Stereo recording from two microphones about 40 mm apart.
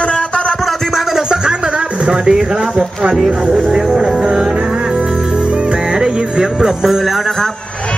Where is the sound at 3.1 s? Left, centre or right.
Centre.